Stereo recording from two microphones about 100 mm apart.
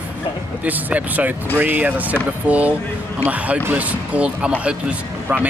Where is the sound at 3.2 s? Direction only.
15° right (ahead or behind).